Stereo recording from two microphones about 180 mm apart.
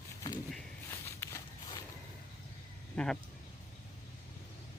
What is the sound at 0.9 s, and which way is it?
Walk, 15° left (ahead or behind).